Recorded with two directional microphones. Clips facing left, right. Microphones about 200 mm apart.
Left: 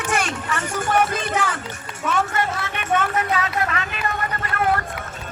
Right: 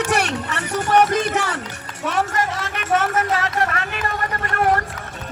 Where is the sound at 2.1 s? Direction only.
40° right (ahead or behind).